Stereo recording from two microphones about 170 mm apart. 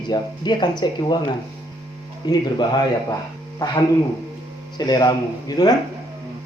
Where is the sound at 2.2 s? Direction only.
25° left (ahead or behind).